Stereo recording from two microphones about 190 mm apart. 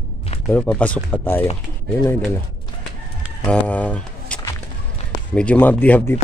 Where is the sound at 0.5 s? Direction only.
5° left (ahead or behind).